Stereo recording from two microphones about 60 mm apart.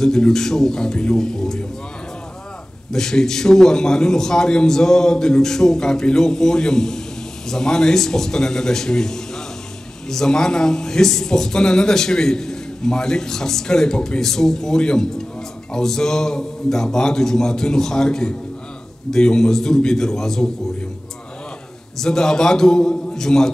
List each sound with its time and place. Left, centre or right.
0.0 s a man's voice: centre
2.9 s a man's voice: centre
21.9 s a man's voice: centre